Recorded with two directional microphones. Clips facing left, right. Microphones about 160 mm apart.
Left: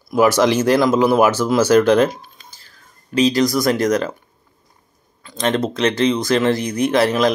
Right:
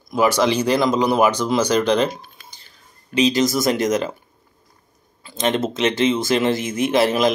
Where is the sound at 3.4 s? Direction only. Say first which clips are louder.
Left 2 dB; centre (ahead or behind).